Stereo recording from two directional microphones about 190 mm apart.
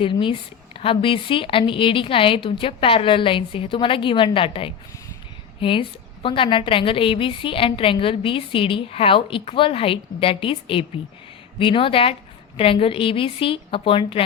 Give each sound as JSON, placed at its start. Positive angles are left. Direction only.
{"t": 0.0, "sound": "a woman's voice", "side_deg": 25}